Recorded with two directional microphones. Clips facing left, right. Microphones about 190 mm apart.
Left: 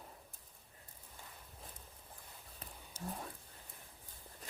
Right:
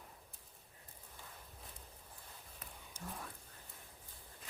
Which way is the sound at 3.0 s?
35° left (ahead or behind).